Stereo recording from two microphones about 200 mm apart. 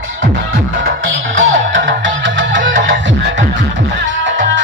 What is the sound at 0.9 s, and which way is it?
Music, 65° right (ahead or behind).